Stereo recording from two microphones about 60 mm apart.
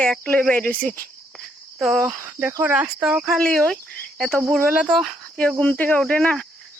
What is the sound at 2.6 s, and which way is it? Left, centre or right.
Speech, right.